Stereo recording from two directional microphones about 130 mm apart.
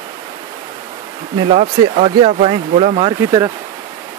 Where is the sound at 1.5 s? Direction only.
50° right (ahead or behind).